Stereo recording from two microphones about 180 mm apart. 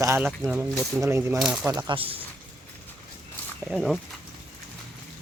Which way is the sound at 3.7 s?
Centre (ahead or behind).